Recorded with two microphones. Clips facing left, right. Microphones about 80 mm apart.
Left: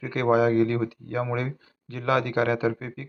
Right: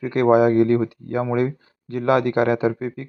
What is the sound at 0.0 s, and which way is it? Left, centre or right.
Speech, right.